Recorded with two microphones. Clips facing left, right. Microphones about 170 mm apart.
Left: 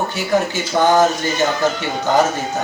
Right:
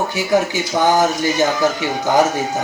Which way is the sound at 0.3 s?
15° right (ahead or behind).